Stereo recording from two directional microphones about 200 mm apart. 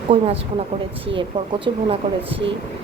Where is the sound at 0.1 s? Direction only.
25° right (ahead or behind).